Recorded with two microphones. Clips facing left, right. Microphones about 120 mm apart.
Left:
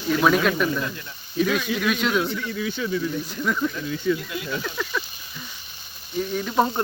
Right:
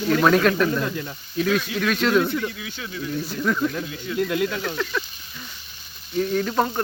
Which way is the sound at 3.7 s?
60° right (ahead or behind).